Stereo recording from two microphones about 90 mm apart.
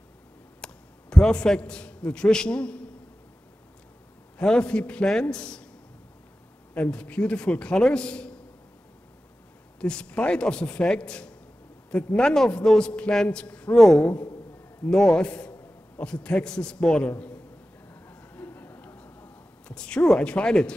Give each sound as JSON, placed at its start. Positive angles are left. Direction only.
{"t": 0.6, "sound": "a sound", "side_deg": 10}
{"t": 1.1, "sound": "a man's voice", "side_deg": 10}
{"t": 4.4, "sound": "a man's voice", "side_deg": 10}
{"t": 6.7, "sound": "a man's voice", "side_deg": 15}
{"t": 9.8, "sound": "a man's voice", "side_deg": 10}
{"t": 18.0, "sound": "a sound", "side_deg": 20}
{"t": 19.7, "sound": "a man's voice", "side_deg": 10}